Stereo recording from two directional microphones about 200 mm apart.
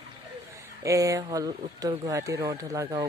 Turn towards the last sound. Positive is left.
turn(degrees=-20)  # may be behind; listen again after turning